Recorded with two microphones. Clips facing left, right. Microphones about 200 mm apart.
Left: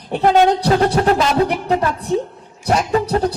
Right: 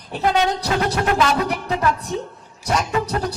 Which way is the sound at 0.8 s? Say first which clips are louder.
Left 4 dB; 30° left (ahead or behind).